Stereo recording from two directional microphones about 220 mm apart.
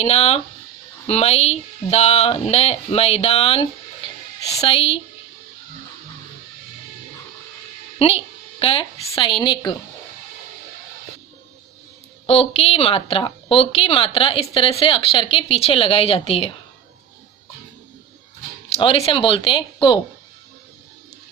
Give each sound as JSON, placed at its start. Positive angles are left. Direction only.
{"t": 0.0, "sound": "a woman's voice", "side_deg": 30}
{"t": 7.9, "sound": "a woman's voice", "side_deg": 25}
{"t": 12.2, "sound": "a woman's voice", "side_deg": 25}
{"t": 18.8, "sound": "a woman's voice", "side_deg": 25}